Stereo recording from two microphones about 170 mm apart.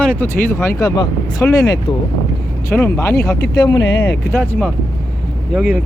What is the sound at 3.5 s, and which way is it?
Speech, 25° left (ahead or behind).